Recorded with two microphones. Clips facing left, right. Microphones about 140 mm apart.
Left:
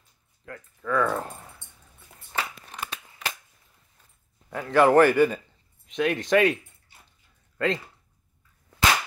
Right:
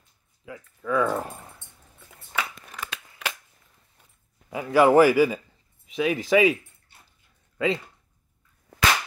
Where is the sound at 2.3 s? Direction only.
30° left (ahead or behind).